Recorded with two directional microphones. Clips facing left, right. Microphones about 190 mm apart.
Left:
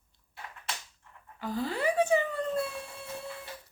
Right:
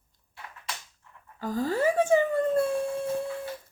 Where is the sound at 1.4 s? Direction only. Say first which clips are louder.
Right 5 dB; 45° right (ahead or behind).